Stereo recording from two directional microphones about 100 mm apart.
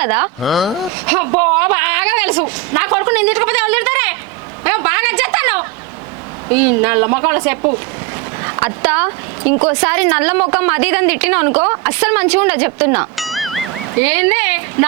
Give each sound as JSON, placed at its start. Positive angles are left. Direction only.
{"t": 0.0, "sound": "speech", "side_deg": -20}
{"t": 0.4, "sound": "speech", "side_deg": 0}
{"t": 1.0, "sound": "speech", "side_deg": -25}
{"t": 4.6, "sound": "a sound", "side_deg": -25}
{"t": 6.5, "sound": "speech", "side_deg": -20}
{"t": 8.4, "sound": "a sound", "side_deg": -30}
{"t": 9.0, "sound": "speech", "side_deg": -25}
{"t": 13.1, "sound": "a sound", "side_deg": 0}
{"t": 14.0, "sound": "speech", "side_deg": -20}